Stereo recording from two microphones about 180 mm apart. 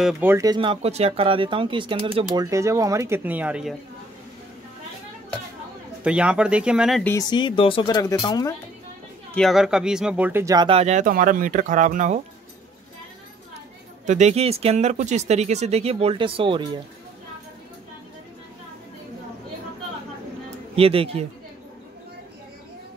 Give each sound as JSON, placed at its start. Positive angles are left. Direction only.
{"t": 0.0, "sound": "speech", "side_deg": -10}
{"t": 2.4, "sound": "speech", "side_deg": -15}
{"t": 6.0, "sound": "speech", "side_deg": -5}
{"t": 7.2, "sound": "speech", "side_deg": 25}
{"t": 9.3, "sound": "speech", "side_deg": 0}
{"t": 10.8, "sound": "speech", "side_deg": -40}
{"t": 14.0, "sound": "speech", "side_deg": -40}
{"t": 20.7, "sound": "speech", "side_deg": -30}